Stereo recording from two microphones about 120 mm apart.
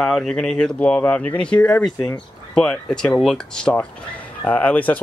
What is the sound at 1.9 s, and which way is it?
Speech, 40° left (ahead or behind).